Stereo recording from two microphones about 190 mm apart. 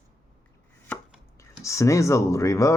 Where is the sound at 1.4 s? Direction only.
15° left (ahead or behind).